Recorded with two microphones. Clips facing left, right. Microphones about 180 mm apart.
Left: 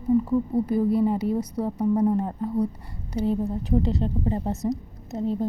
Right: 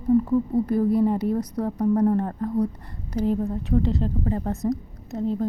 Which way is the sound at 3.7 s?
30° left (ahead or behind).